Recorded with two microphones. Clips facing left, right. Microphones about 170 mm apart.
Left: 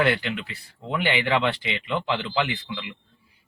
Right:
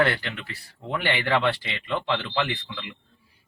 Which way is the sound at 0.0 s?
15° left (ahead or behind).